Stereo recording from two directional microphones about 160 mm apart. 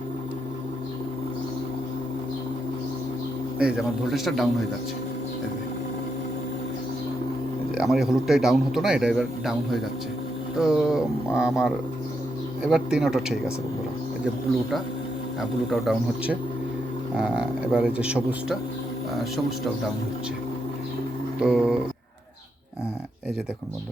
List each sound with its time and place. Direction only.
3.6 s a man's voice: 5° right (ahead or behind)
7.8 s a man's voice: 5° right (ahead or behind)
10.6 s a man's voice: 5° right (ahead or behind)
15.4 s a man's voice: centre (ahead or behind)
21.4 s a man's voice: 5° right (ahead or behind)